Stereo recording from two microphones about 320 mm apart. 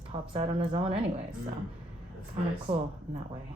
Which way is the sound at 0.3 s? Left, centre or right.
Centre.